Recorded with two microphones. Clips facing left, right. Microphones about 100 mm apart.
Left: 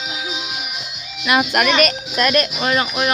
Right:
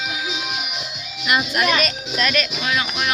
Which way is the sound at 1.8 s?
45° left (ahead or behind).